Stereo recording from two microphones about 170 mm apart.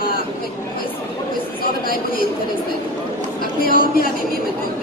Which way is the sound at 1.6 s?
60° left (ahead or behind).